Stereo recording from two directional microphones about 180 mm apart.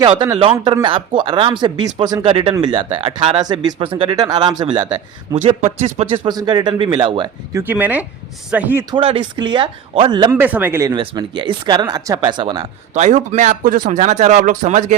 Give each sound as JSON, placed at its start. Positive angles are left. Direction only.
{"t": 0.0, "sound": "a man's voice", "side_deg": -25}
{"t": 6.2, "sound": "speech", "side_deg": -25}
{"t": 7.6, "sound": "speech", "side_deg": -10}
{"t": 8.9, "sound": "speech", "side_deg": -30}
{"t": 10.3, "sound": "speech", "side_deg": -10}
{"t": 12.9, "sound": "speech", "side_deg": -40}